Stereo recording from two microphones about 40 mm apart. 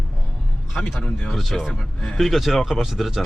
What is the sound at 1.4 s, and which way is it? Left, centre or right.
Speech, centre.